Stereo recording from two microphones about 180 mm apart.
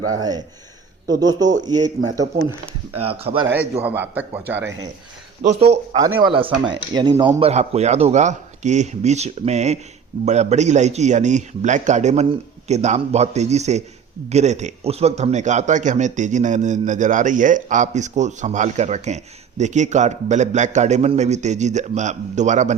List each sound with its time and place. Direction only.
0.1 s speech: 20° right (ahead or behind)
3.4 s a man's voice: 10° right (ahead or behind)
5.4 s a man's voice: 35° right (ahead or behind)